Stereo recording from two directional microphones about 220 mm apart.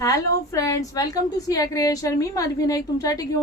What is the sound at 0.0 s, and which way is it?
A woman's voice, 15° left (ahead or behind).